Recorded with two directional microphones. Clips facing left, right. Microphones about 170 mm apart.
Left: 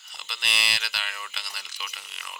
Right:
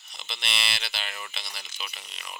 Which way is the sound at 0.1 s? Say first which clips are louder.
Right 1 dB; 20° right (ahead or behind).